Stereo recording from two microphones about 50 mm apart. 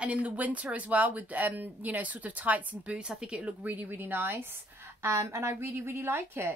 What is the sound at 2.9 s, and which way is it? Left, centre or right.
A woman's voice, centre.